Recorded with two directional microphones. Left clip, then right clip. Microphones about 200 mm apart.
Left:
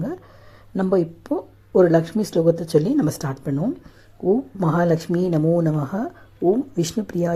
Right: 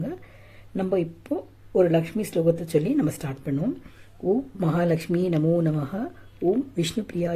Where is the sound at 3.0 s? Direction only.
Centre (ahead or behind).